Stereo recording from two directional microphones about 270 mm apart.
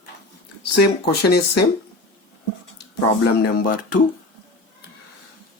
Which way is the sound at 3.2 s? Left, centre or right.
Left.